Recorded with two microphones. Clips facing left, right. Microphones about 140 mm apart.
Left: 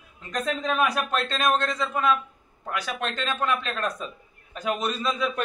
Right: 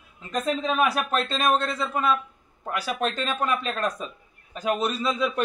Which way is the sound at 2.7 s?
35° right (ahead or behind).